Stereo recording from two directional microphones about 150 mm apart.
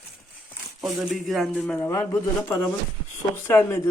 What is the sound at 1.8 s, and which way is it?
A man's voice, 20° left (ahead or behind).